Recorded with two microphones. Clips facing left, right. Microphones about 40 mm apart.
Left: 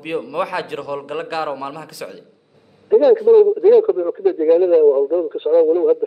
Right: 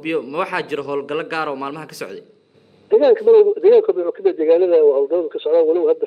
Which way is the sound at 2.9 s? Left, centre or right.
Right.